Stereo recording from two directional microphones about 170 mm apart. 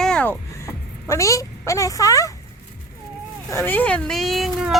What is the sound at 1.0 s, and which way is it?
A woman's voice, 15° left (ahead or behind).